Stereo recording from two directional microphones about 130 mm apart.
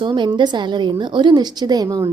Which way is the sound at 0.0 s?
40° right (ahead or behind).